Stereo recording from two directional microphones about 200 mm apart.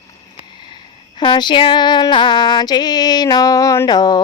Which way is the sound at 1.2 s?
25° left (ahead or behind).